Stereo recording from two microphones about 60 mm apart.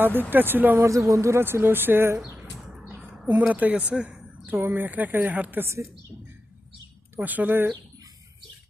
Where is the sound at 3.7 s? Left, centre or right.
Centre.